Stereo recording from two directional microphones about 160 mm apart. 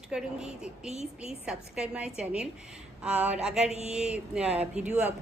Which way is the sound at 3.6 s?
40° left (ahead or behind).